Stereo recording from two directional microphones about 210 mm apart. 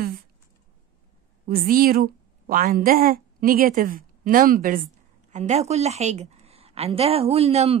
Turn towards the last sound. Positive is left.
turn(degrees=-30)  # may be behind; listen again after turning